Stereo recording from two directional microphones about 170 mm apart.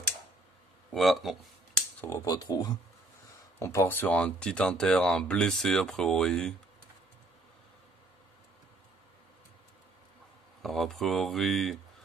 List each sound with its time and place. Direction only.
0.9 s speech: centre (ahead or behind)
2.0 s speech: 15° left (ahead or behind)
10.6 s speech: centre (ahead or behind)